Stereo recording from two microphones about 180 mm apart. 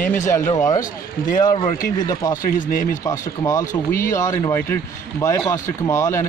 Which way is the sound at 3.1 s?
20° left (ahead or behind).